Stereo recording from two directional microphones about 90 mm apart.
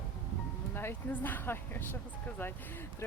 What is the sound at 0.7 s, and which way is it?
Speech, 25° left (ahead or behind).